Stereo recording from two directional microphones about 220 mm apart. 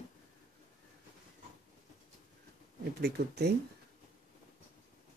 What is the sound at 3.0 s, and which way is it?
Speech, 50° right (ahead or behind).